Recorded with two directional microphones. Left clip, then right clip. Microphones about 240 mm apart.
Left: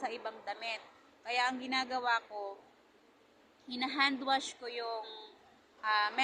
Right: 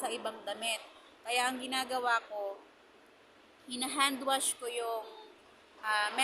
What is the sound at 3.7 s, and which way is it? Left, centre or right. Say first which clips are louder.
A woman's voice: even; centre.